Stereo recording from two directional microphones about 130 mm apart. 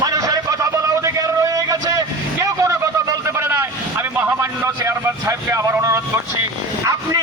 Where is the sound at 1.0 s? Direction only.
25° right (ahead or behind).